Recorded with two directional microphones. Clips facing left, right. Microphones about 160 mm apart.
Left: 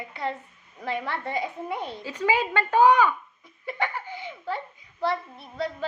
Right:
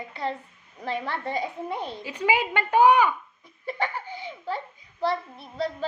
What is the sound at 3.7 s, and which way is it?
Laughter, 35° right (ahead or behind).